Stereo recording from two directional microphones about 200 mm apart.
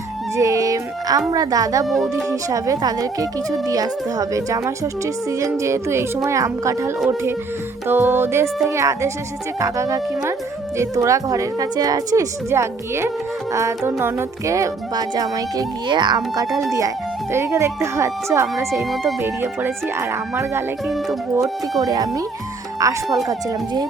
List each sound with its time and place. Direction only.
0.3 s music: 15° right (ahead or behind)
1.3 s speech: 20° right (ahead or behind)
1.9 s speech: centre (ahead or behind)
2.3 s speech: 15° right (ahead or behind)
18.8 s speech: centre (ahead or behind)
19.2 s speech: 10° right (ahead or behind)
20.8 s speech: centre (ahead or behind)
21.3 s speech: 15° right (ahead or behind)